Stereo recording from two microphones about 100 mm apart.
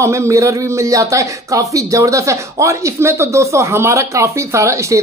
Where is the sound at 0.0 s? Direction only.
30° right (ahead or behind).